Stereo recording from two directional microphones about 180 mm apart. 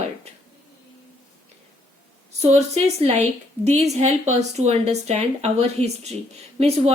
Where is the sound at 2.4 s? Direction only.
35° right (ahead or behind).